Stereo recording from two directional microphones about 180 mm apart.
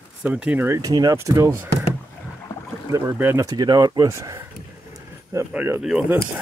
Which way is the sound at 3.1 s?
10° right (ahead or behind).